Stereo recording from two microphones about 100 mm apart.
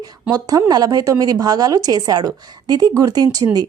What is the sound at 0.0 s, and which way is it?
A woman's voice, 40° right (ahead or behind).